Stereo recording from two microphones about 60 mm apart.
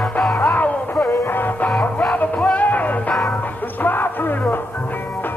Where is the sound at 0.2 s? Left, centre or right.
Centre.